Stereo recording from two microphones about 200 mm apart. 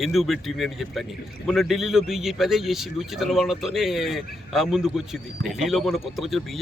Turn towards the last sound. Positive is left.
turn(degrees=0)  # may be behind; listen again after turning